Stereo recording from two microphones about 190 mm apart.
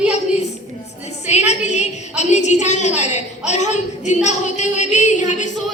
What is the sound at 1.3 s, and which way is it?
A woman's voice, 35° left (ahead or behind).